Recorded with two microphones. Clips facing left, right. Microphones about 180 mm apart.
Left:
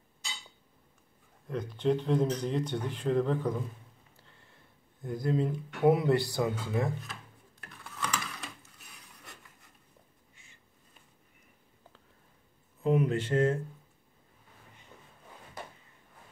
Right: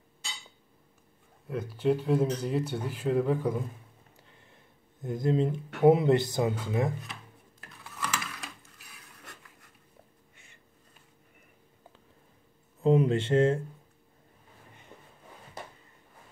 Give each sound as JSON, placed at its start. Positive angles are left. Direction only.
{"t": 1.5, "sound": "speech", "side_deg": -5}
{"t": 5.0, "sound": "speech", "side_deg": -20}
{"t": 7.6, "sound": "typing", "side_deg": 0}
{"t": 10.3, "sound": "a sound", "side_deg": -60}
{"t": 12.8, "sound": "speech", "side_deg": -25}